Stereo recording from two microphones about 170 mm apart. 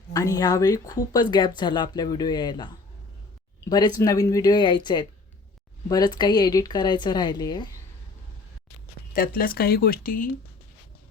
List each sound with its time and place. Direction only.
0.1 s speech: 20° left (ahead or behind)
9.1 s speech: 55° left (ahead or behind)